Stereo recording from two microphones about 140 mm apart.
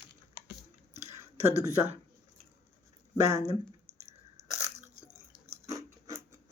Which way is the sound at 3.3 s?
50° right (ahead or behind).